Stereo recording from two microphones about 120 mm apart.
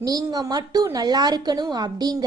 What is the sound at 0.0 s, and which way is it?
A woman's voice, 30° right (ahead or behind).